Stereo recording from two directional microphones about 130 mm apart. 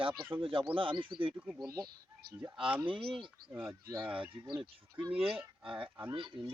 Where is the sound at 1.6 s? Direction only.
30° right (ahead or behind).